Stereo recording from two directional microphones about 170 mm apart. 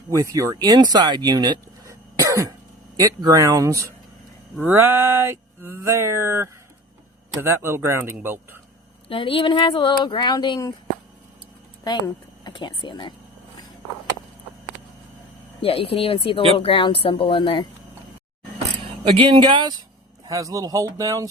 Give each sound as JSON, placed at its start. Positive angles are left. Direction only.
{"t": 0.1, "sound": "speech", "side_deg": -20}
{"t": 4.6, "sound": "a sound", "side_deg": -10}
{"t": 9.0, "sound": "speech", "side_deg": 30}
{"t": 11.8, "sound": "speech", "side_deg": 25}
{"t": 15.6, "sound": "speech", "side_deg": 35}
{"t": 19.0, "sound": "speech", "side_deg": -30}